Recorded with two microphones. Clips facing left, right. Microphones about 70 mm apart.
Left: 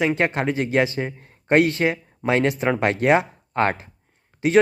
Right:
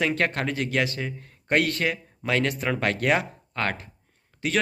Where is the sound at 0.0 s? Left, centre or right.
Centre.